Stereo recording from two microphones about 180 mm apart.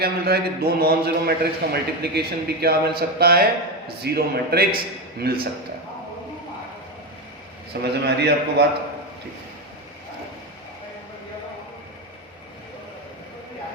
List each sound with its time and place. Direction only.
0.0 s a man's voice: 60° right (ahead or behind)
7.7 s a man's voice: 65° right (ahead or behind)